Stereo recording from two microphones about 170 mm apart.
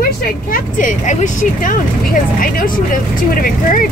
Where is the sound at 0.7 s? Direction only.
45° left (ahead or behind).